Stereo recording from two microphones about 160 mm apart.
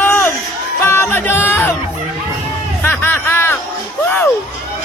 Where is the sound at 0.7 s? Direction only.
15° left (ahead or behind).